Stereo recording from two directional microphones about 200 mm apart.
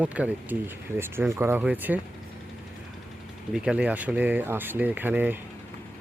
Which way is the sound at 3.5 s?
5° right (ahead or behind).